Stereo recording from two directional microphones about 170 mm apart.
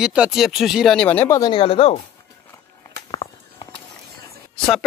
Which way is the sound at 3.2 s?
35° left (ahead or behind).